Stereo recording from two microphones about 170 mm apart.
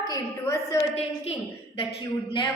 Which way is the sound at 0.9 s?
35° left (ahead or behind).